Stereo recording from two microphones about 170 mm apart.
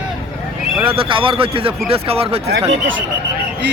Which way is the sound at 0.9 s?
30° right (ahead or behind).